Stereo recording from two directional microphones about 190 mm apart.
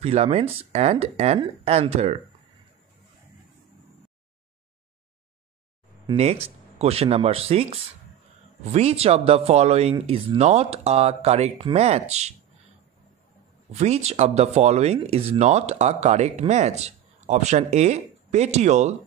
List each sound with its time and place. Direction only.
0.0 s speech: 35° right (ahead or behind)
6.0 s speech: 30° right (ahead or behind)
13.7 s speech: 35° right (ahead or behind)